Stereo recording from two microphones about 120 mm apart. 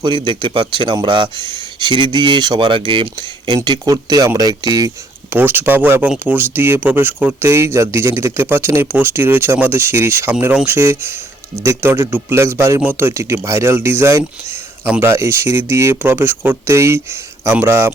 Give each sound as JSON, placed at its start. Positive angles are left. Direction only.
{"t": 0.0, "sound": "a man's voice", "side_deg": -40}
{"t": 5.3, "sound": "speech", "side_deg": -15}